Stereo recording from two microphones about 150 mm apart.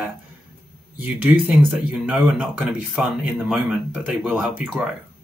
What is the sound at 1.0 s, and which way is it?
Speech, 10° right (ahead or behind).